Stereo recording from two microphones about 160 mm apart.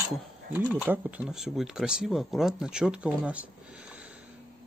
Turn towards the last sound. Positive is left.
turn(degrees=-10)  # may be behind; listen again after turning